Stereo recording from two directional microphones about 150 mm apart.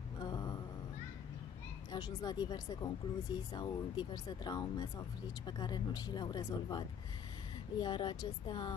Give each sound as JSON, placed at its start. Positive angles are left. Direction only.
{"t": 0.2, "sound": "mantra", "side_deg": 25}
{"t": 1.9, "sound": "speech", "side_deg": 30}